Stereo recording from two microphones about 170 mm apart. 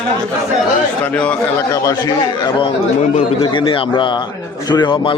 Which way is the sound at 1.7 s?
20° left (ahead or behind).